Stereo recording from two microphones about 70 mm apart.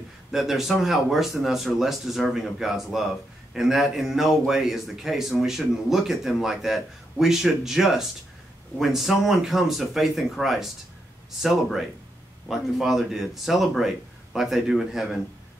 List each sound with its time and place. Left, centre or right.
0.3 s a man's voice: centre
12.4 s a man's voice: centre